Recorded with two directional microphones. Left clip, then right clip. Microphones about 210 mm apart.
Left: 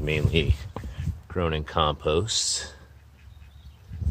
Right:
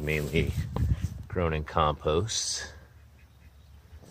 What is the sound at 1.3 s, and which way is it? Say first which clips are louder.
Speech: left 2 dB; centre (ahead or behind).